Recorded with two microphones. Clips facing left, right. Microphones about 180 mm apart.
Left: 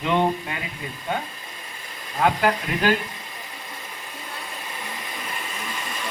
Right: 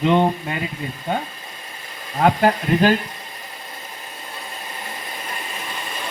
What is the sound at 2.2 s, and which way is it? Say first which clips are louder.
Speech: right 4 dB; 30° right (ahead or behind).